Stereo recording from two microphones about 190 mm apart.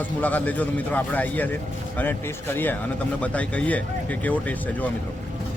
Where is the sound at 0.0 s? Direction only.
10° left (ahead or behind).